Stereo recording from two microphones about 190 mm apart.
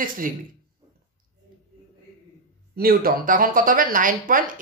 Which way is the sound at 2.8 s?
50° right (ahead or behind).